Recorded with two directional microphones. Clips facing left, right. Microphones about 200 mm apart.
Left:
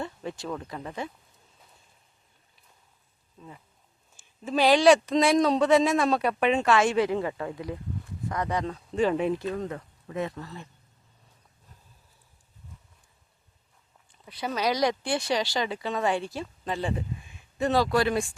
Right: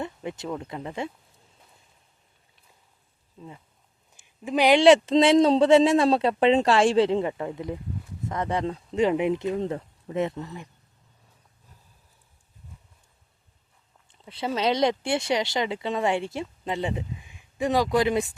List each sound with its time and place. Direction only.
0.0 s speech: 20° right (ahead or behind)
4.1 s speech: 15° right (ahead or behind)
14.1 s speech: 25° right (ahead or behind)